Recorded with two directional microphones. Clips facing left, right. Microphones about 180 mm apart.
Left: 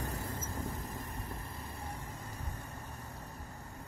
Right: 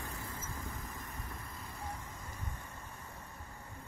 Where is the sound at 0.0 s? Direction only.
35° left (ahead or behind).